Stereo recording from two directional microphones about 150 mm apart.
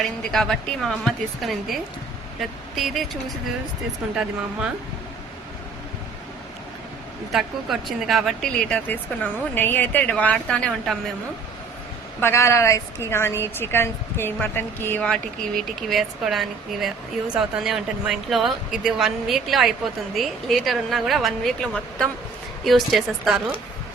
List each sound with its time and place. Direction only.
0.2 s speech: 5° left (ahead or behind)
7.3 s speech: centre (ahead or behind)
12.2 s speech: 20° left (ahead or behind); by 23.4 s centre (ahead or behind)